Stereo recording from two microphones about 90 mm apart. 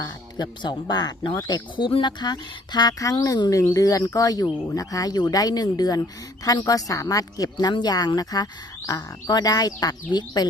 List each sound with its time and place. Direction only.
0.0 s speech: 55° left (ahead or behind)
1.7 s speech: 65° left (ahead or behind); by 10.4 s 50° left (ahead or behind)